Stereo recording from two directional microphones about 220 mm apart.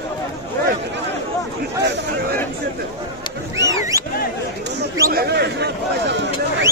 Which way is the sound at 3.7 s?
15° right (ahead or behind).